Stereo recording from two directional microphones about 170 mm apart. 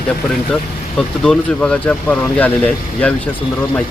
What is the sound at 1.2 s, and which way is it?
Speech, 5° left (ahead or behind).